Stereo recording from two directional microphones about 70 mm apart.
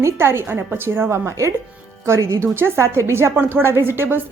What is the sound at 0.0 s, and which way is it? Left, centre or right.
Speech, right.